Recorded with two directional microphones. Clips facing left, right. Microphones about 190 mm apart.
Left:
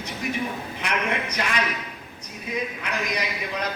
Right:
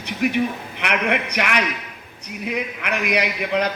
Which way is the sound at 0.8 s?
65° right (ahead or behind).